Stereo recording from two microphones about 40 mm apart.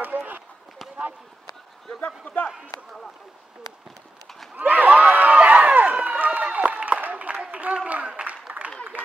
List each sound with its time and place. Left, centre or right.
0.0 s run: right
2.0 s a man's voice: left
4.6 s crowd: right
5.9 s run: right
6.5 s a sound: right